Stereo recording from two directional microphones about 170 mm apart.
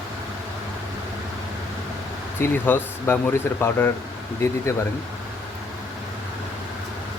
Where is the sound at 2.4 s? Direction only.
10° left (ahead or behind).